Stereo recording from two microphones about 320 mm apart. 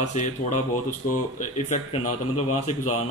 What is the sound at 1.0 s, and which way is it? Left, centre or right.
Speech, left.